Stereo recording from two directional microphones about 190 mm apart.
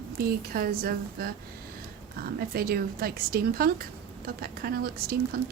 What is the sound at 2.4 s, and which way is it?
A woman's voice, 55° right (ahead or behind).